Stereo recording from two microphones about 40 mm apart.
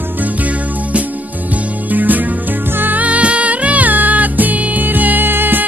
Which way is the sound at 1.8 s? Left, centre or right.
Right.